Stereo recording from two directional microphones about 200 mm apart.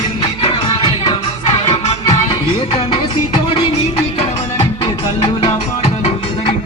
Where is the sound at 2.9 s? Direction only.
25° left (ahead or behind).